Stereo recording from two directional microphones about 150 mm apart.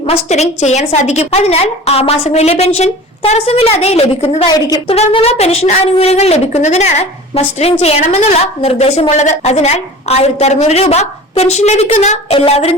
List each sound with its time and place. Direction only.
0.0 s a woman's voice: 45° left (ahead or behind)